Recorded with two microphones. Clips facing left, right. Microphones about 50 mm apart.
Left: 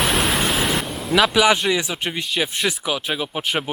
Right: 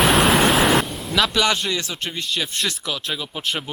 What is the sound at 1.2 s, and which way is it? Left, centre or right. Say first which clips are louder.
Speech: left 3 dB; centre.